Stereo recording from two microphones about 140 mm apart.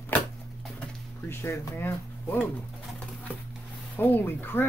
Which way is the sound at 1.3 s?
20° left (ahead or behind).